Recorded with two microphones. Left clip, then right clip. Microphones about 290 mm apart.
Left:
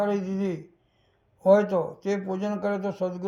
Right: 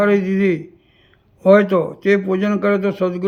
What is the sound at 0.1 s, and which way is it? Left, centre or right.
A man's voice, centre.